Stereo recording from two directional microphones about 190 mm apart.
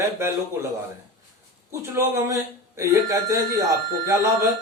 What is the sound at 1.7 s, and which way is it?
Speech, 15° right (ahead or behind).